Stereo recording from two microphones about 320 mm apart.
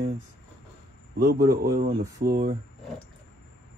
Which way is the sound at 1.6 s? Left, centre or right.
Right.